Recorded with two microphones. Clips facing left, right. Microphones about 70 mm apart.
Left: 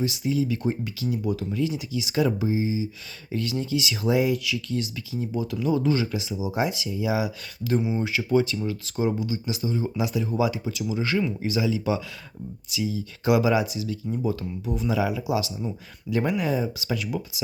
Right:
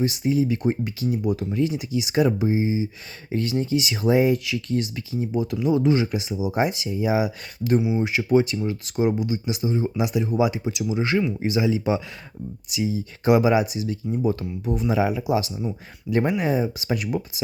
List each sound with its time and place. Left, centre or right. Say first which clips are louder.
0.0 s speech: right 3 dB; right
7.8 s speech: right 1 dB; centre
8.3 s speech: right 3 dB; right